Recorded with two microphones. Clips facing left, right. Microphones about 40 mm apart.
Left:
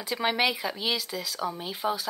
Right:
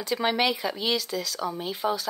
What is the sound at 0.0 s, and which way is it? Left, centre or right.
Speech, centre.